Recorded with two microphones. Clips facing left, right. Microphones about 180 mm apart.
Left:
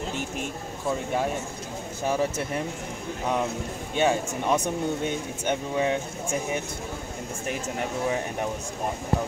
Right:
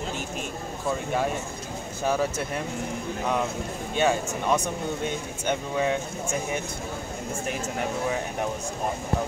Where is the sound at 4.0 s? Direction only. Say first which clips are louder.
Even; 20° left (ahead or behind).